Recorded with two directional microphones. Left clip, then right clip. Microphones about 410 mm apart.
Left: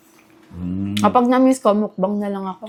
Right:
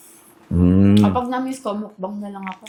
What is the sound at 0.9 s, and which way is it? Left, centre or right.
Speech, left.